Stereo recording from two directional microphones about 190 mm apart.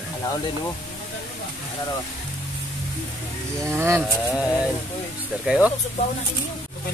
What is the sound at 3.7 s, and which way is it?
Speech, 15° right (ahead or behind).